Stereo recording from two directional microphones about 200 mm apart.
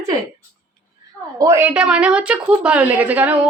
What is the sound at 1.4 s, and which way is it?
A woman's voice, 15° right (ahead or behind).